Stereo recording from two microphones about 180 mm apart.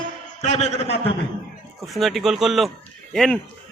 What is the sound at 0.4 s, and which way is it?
Speech, 40° left (ahead or behind).